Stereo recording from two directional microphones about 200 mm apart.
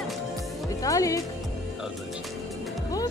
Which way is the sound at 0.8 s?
15° left (ahead or behind).